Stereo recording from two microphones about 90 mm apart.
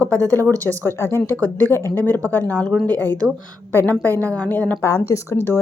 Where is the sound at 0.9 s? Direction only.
25° left (ahead or behind).